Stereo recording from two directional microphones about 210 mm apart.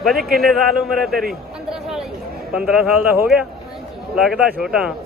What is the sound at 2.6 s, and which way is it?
A man's voice, 5° right (ahead or behind).